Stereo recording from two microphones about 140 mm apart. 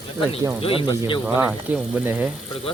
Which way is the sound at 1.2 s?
15° right (ahead or behind).